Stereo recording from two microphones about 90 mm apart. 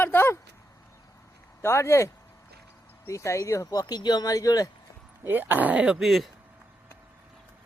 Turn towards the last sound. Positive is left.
turn(degrees=0)  # may be behind; listen again after turning